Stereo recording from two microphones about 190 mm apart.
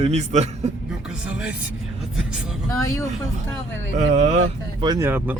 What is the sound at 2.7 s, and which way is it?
Speech, 15° left (ahead or behind).